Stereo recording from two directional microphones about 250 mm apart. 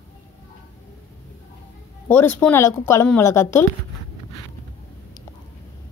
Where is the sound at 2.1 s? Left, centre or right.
Centre.